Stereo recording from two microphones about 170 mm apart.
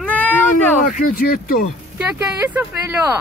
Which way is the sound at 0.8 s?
50° left (ahead or behind).